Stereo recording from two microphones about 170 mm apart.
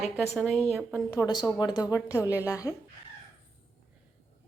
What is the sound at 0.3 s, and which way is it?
Speech, centre (ahead or behind).